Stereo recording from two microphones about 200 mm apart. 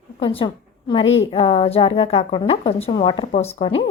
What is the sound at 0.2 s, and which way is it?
Speech, 25° left (ahead or behind).